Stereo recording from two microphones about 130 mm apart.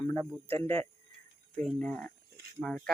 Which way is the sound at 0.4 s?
20° left (ahead or behind).